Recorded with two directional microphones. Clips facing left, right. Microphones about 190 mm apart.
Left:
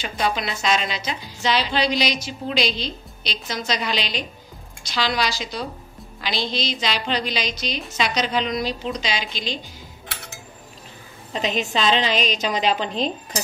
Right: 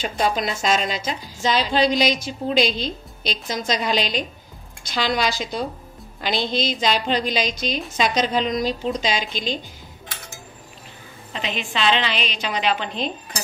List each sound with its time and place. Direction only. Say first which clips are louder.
0.0 s a woman's voice: right 2 dB; 40° right (ahead or behind)
11.3 s a woman's voice: left 4 dB; 40° left (ahead or behind)